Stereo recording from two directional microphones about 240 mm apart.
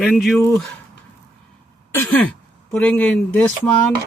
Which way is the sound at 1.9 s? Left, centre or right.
Centre.